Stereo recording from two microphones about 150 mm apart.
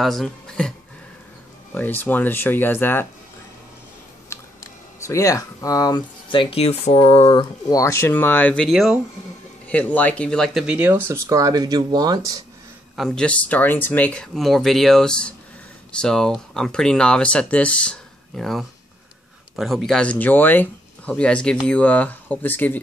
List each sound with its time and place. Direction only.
0.0 s speech: centre (ahead or behind)
5.0 s speech: 20° left (ahead or behind); by 7.4 s 40° left (ahead or behind)
7.7 s speech: 20° left (ahead or behind); by 10.6 s 5° left (ahead or behind)
10.7 s speech: 15° right (ahead or behind)
12.9 s speech: centre (ahead or behind)